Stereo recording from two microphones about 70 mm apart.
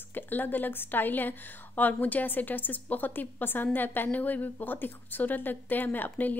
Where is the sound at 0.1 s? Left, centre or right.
Left.